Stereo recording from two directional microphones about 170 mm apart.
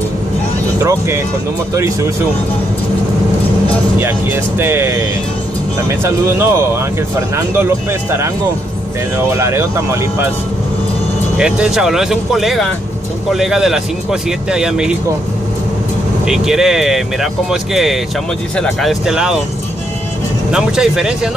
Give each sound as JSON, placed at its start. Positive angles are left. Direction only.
{"t": 0.7, "sound": "speech", "side_deg": -15}
{"t": 4.0, "sound": "speech", "side_deg": -15}
{"t": 9.3, "sound": "speech", "side_deg": -15}
{"t": 11.3, "sound": "speech", "side_deg": -5}
{"t": 16.3, "sound": "speech", "side_deg": -5}
{"t": 20.5, "sound": "speech", "side_deg": -5}